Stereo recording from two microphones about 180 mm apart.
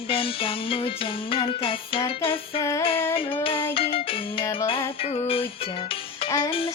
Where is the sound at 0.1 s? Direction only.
30° left (ahead or behind).